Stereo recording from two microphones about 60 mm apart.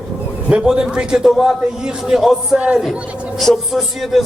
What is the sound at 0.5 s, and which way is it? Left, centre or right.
A man's voice, centre.